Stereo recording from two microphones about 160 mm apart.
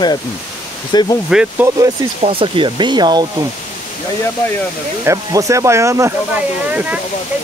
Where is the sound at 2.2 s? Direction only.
35° right (ahead or behind).